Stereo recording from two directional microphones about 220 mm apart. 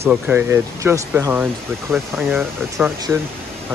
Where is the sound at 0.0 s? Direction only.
10° right (ahead or behind).